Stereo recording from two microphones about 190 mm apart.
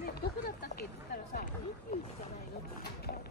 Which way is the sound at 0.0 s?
55° left (ahead or behind).